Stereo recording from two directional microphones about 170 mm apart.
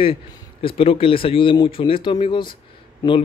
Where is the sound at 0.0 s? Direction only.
30° left (ahead or behind).